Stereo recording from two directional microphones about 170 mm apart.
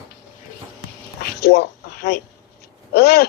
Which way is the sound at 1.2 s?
70° left (ahead or behind).